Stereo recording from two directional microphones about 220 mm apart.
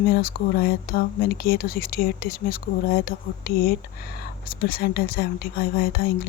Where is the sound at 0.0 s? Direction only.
45° left (ahead or behind).